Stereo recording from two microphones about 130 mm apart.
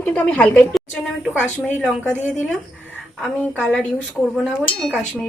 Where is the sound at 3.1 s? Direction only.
5° left (ahead or behind).